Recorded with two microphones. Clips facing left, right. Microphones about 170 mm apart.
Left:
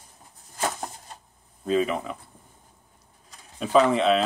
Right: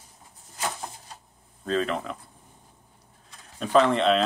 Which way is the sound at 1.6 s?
10° left (ahead or behind).